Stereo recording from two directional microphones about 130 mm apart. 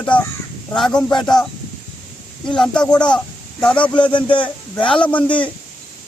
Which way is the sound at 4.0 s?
40° left (ahead or behind).